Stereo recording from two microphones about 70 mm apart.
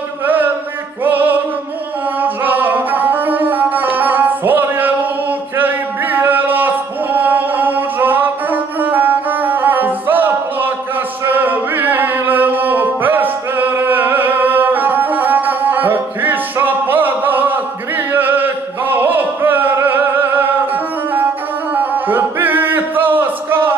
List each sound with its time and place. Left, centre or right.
1.0 s music: right